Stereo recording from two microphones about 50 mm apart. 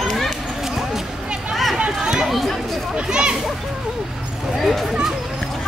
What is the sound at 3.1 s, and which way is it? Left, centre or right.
Speech, centre.